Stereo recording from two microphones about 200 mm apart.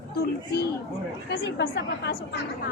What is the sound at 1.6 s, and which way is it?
Speech, 55° left (ahead or behind).